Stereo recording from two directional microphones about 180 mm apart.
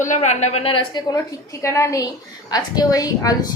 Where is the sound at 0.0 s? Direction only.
40° left (ahead or behind).